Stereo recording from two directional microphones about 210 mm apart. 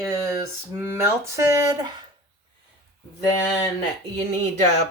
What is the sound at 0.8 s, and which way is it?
Speech, 10° right (ahead or behind).